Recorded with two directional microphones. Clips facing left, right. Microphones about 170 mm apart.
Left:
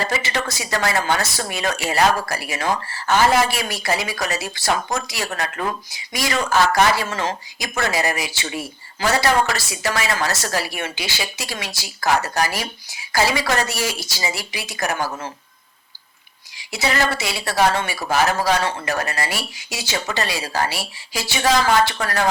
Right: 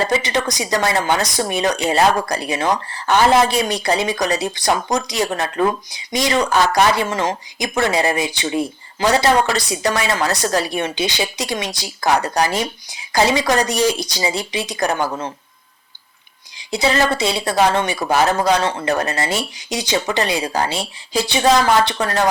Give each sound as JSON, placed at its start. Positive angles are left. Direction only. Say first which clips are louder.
{"t": 0.0, "sound": "speech", "louder": "right 5 dB", "side_deg": -20}
{"t": 16.9, "sound": "speech", "louder": "right 3 dB", "side_deg": -25}